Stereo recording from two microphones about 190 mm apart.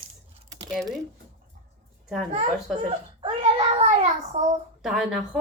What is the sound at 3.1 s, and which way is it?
Speech, 25° right (ahead or behind).